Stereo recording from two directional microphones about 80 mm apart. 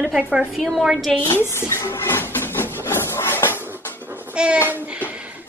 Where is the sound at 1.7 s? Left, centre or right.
Left.